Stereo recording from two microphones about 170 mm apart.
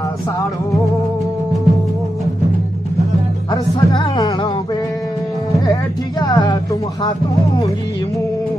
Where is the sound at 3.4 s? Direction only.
25° left (ahead or behind).